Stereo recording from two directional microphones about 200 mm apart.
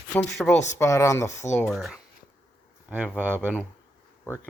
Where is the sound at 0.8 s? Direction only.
15° left (ahead or behind).